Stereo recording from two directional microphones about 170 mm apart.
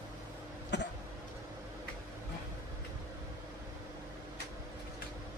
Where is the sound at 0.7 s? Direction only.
90° left.